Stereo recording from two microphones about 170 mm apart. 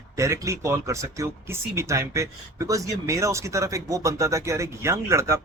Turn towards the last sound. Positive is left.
turn(degrees=-15)  # may be behind; listen again after turning